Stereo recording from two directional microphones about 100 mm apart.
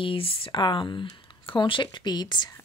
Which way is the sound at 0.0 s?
65° left (ahead or behind).